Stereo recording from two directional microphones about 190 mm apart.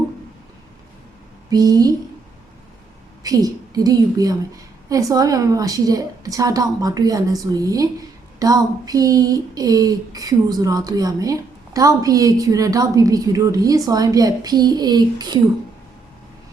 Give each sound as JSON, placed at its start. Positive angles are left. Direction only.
{"t": 1.5, "sound": "a woman's voice", "side_deg": -20}
{"t": 3.2, "sound": "speech", "side_deg": -20}